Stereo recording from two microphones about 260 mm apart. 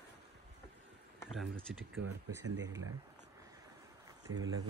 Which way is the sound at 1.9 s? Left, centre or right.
Right.